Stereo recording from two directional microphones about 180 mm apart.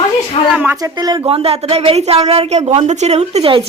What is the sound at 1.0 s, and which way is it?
Speech, 25° right (ahead or behind).